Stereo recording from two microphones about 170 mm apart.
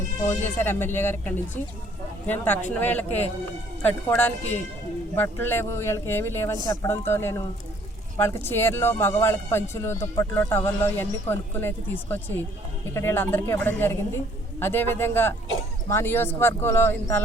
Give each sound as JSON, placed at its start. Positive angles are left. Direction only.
{"t": 0.3, "sound": "speech", "side_deg": 10}